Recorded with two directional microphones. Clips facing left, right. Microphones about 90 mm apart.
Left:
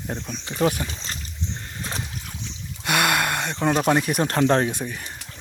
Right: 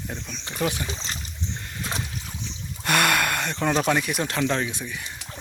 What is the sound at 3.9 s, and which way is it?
Speech, 30° left (ahead or behind).